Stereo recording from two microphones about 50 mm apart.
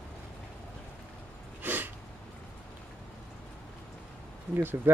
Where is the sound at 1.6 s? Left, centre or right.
Right.